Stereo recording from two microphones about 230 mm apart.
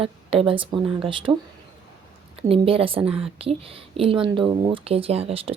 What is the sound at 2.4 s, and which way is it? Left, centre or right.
Speech, right.